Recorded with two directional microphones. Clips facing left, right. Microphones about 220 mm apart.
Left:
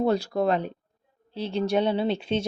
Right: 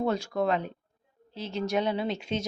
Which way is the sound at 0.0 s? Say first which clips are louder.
Left 4 dB; 35° left (ahead or behind).